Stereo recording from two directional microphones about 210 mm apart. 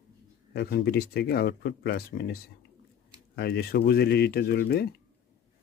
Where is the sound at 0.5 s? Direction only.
50° left (ahead or behind).